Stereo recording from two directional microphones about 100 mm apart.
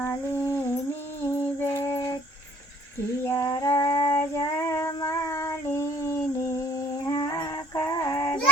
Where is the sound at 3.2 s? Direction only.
30° left (ahead or behind).